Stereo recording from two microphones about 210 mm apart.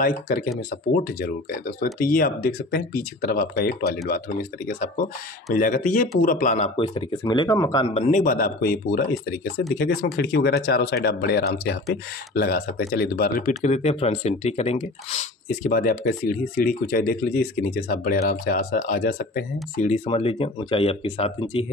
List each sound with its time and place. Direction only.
0.0 s speech: 40° left (ahead or behind)
6.8 s speech: 25° left (ahead or behind)
8.1 s speech: 40° left (ahead or behind)
13.7 s speech: 30° left (ahead or behind)